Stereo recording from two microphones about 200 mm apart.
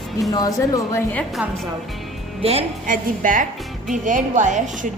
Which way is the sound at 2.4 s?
30° right (ahead or behind).